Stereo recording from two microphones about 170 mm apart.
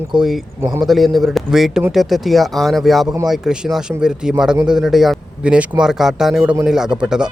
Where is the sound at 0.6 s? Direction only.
15° right (ahead or behind).